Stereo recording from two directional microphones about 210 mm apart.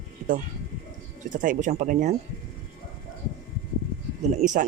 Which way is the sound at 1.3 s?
40° right (ahead or behind).